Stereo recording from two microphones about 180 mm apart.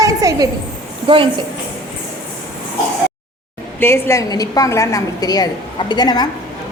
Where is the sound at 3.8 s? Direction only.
15° left (ahead or behind).